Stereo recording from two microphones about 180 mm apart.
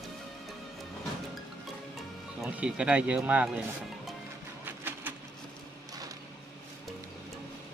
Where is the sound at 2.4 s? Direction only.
5° right (ahead or behind).